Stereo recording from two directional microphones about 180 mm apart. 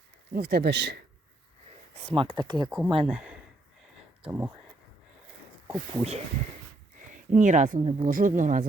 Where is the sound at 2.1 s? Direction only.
25° right (ahead or behind).